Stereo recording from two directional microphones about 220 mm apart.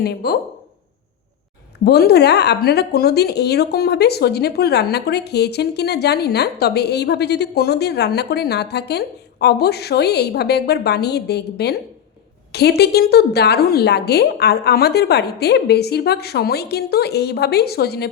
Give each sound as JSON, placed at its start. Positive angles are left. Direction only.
{"t": 0.0, "sound": "a woman's voice", "side_deg": 45}
{"t": 1.8, "sound": "a woman's voice", "side_deg": 45}